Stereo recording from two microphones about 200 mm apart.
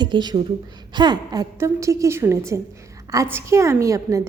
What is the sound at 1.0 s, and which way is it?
A woman's voice, 20° right (ahead or behind).